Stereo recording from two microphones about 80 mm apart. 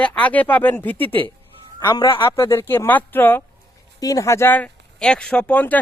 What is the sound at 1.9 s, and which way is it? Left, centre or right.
Speech, left.